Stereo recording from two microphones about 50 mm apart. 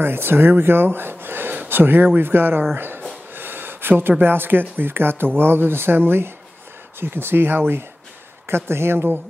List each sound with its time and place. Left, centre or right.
0.0 s speech: right
3.3 s a sound: right
4.2 s speech: right